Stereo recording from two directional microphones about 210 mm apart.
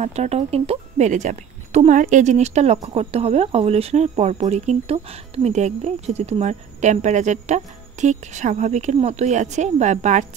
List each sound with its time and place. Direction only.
0.0 s speech: 30° right (ahead or behind)